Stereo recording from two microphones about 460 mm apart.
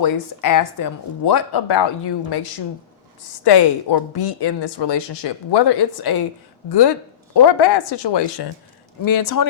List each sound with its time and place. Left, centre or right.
0.0 s speech: left
9.0 s speech: left